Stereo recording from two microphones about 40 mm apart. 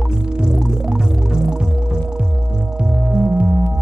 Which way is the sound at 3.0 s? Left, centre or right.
Right.